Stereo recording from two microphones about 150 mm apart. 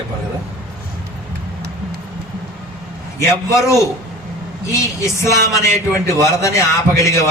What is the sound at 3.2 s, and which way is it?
A man's voice, 15° left (ahead or behind).